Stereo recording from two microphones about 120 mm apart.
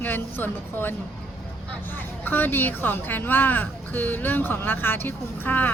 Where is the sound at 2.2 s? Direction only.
15° left (ahead or behind).